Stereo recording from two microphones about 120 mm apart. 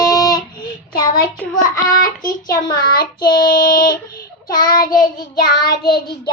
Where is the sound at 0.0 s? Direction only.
30° left (ahead or behind).